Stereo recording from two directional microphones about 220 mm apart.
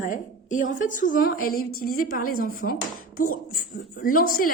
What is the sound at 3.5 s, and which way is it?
A woman's voice, 40° left (ahead or behind).